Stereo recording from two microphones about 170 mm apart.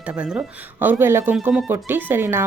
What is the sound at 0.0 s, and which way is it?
Speech, 5° right (ahead or behind).